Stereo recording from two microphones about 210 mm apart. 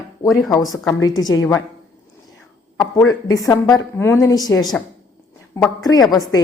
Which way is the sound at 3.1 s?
15° left (ahead or behind).